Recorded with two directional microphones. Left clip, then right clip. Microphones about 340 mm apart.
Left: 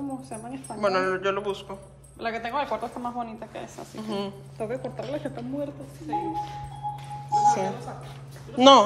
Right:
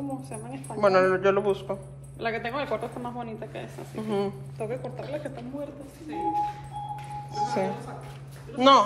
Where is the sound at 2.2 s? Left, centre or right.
Left.